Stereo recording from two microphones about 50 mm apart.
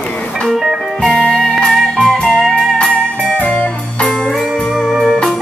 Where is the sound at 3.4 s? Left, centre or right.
Left.